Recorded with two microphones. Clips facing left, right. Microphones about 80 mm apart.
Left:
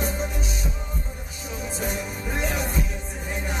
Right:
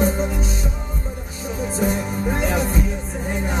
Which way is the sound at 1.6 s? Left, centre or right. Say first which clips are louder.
Right 8 dB; right.